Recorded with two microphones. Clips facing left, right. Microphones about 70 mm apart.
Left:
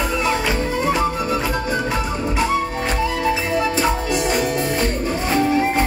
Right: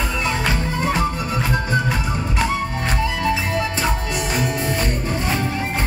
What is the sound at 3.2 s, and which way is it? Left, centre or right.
Music, centre.